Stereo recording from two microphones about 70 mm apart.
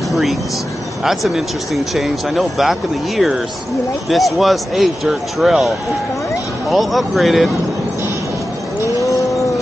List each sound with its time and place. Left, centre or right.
0.1 s speech: centre
6.7 s speech: centre
8.8 s a sound: left